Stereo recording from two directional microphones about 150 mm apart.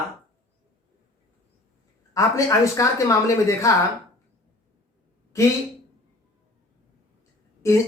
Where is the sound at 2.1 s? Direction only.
20° left (ahead or behind).